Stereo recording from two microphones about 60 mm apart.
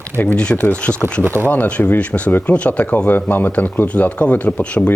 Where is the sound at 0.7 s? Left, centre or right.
Centre.